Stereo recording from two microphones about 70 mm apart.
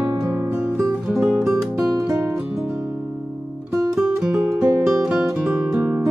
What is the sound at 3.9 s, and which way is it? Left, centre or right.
Music, centre.